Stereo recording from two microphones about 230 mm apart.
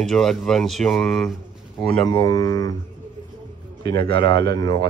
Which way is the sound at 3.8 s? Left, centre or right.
Centre.